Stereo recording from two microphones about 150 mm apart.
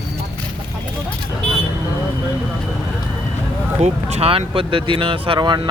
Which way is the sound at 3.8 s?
45° right (ahead or behind).